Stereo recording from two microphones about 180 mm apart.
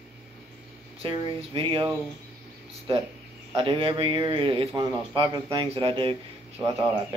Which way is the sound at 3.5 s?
30° right (ahead or behind).